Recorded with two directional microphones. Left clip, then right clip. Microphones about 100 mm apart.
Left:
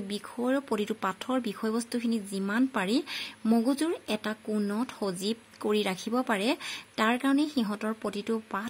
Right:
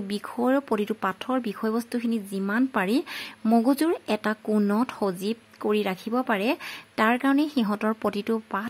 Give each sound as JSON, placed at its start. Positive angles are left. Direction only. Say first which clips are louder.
{"t": 0.5, "sound": "speech", "louder": "right 4 dB", "side_deg": -35}
{"t": 4.6, "sound": "speech", "louder": "right 7 dB", "side_deg": -55}
{"t": 5.0, "sound": "a woman's voice", "louder": "right 4 dB", "side_deg": -25}